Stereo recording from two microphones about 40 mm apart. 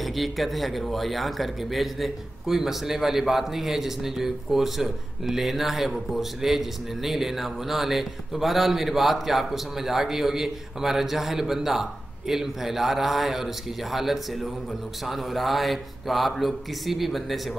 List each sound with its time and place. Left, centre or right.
0.0 s speech: centre